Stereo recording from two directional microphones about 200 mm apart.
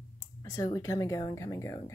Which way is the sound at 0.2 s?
15° left (ahead or behind).